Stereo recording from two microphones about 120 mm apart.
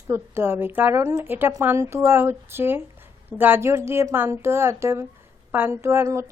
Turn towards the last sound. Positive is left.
turn(degrees=-25)  # may be behind; listen again after turning